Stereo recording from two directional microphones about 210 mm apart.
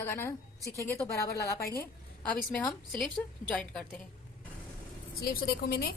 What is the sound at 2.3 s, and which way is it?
A woman's voice, 5° left (ahead or behind).